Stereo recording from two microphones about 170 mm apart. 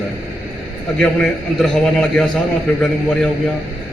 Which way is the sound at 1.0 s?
5° left (ahead or behind).